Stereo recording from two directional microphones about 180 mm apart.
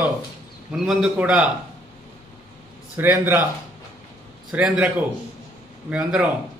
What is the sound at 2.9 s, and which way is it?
Speech, 10° right (ahead or behind).